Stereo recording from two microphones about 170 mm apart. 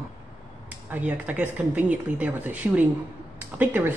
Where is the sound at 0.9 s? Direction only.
10° right (ahead or behind).